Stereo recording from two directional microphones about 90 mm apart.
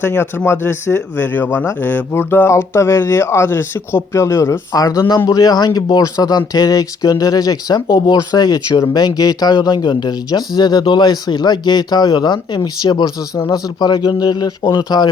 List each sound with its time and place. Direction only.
0.0 s speech: 25° left (ahead or behind); by 15.1 s 45° left (ahead or behind)